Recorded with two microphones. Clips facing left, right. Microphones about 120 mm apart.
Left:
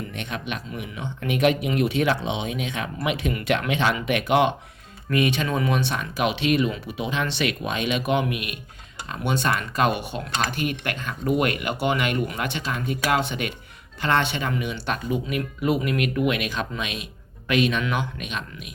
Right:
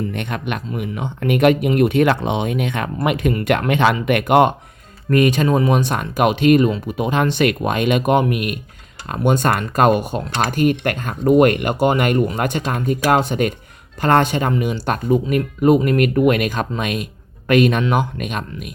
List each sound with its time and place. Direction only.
0.1 s a man's voice: 55° right (ahead or behind)